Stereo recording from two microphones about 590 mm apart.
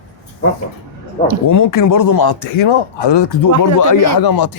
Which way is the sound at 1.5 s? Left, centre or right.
Left.